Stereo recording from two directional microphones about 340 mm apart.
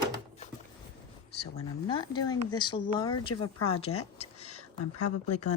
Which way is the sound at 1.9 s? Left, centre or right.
Centre.